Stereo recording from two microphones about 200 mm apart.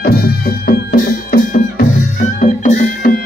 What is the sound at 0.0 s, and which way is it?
Music, 50° left (ahead or behind).